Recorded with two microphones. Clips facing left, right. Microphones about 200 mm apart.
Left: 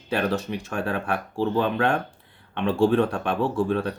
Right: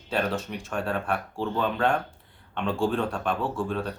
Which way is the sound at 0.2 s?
60° left (ahead or behind).